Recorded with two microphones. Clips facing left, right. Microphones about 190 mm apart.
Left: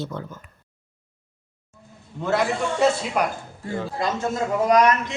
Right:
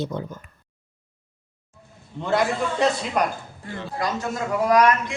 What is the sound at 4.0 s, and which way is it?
Speech, 25° left (ahead or behind).